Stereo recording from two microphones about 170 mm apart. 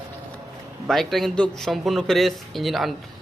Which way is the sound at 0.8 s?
Centre (ahead or behind).